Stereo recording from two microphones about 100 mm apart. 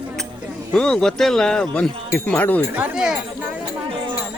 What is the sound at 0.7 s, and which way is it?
Speech, 5° left (ahead or behind).